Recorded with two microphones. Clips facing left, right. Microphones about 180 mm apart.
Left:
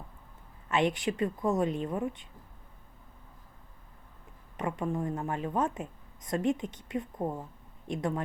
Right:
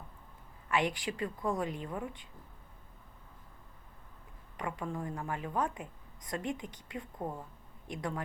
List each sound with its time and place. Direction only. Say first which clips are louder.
0.7 s a woman's voice: left 4 dB; 25° left (ahead or behind)
4.5 s a woman's voice: left 6 dB; 20° left (ahead or behind)